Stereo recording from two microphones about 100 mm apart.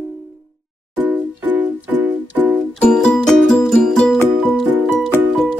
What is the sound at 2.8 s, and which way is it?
Music, 5° left (ahead or behind).